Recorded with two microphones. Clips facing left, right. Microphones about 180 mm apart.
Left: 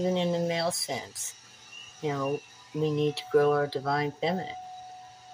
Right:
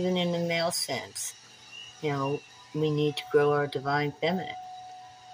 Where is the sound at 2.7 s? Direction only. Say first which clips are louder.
Even; 20° right (ahead or behind).